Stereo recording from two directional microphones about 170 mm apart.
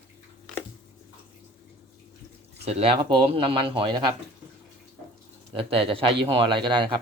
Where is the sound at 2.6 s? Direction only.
35° right (ahead or behind).